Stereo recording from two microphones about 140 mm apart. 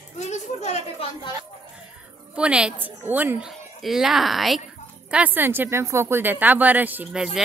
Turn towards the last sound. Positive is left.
turn(degrees=-5)  # may be behind; listen again after turning